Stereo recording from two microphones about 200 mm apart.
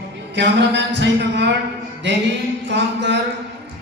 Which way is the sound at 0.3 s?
60° right (ahead or behind).